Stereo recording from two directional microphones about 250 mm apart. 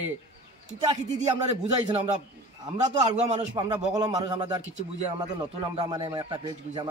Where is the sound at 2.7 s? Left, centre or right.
Right.